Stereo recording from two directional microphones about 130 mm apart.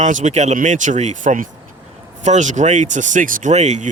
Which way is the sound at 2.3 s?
65° right (ahead or behind).